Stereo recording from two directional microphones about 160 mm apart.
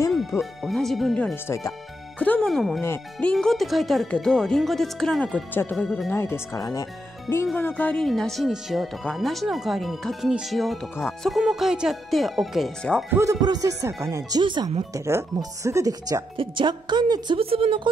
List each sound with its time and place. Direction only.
0.1 s speech: centre (ahead or behind)
2.8 s speech: 10° left (ahead or behind)
6.1 s speech: 15° left (ahead or behind)
7.5 s speech: 10° left (ahead or behind)
13.1 s speech: 20° right (ahead or behind)
14.4 s speech: 30° right (ahead or behind)
15.0 s speech: 15° right (ahead or behind); by 17.8 s 35° right (ahead or behind)